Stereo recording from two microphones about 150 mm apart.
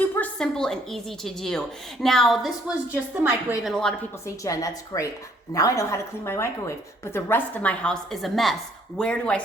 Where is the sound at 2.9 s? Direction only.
10° right (ahead or behind).